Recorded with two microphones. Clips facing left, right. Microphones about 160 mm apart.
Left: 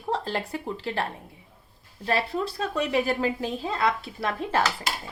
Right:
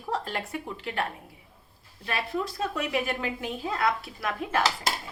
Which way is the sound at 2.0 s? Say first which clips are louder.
Left 4 dB; 30° left (ahead or behind).